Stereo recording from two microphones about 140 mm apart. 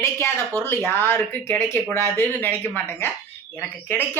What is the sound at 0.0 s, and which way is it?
Speech, 15° left (ahead or behind).